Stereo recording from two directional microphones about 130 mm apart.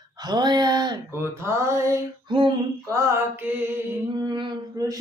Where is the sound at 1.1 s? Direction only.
20° right (ahead or behind).